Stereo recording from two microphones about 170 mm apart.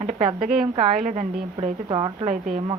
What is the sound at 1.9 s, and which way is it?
Speech, 35° right (ahead or behind).